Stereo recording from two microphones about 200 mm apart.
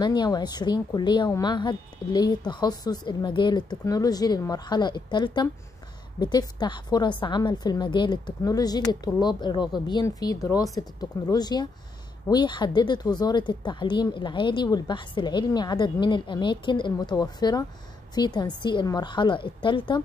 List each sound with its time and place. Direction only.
0.0 s a woman's voice: 20° left (ahead or behind)